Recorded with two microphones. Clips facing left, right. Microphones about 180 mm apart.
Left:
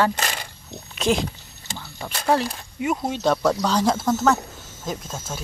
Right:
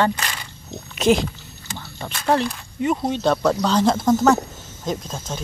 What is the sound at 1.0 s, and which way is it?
Speech, centre (ahead or behind).